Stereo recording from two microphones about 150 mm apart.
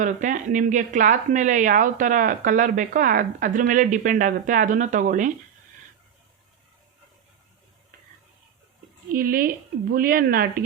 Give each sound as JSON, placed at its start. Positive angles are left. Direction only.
{"t": 0.0, "sound": "speech", "side_deg": -55}
{"t": 9.1, "sound": "speech", "side_deg": -75}